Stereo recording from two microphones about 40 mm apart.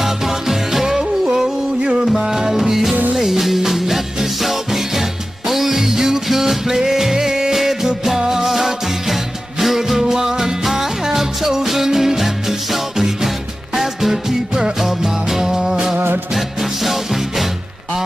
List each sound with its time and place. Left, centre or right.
0.0 s music: centre
14.8 s music: centre
16.3 s music: centre